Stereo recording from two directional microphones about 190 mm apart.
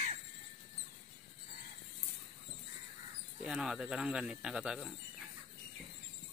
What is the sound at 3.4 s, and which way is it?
Speech, 5° right (ahead or behind).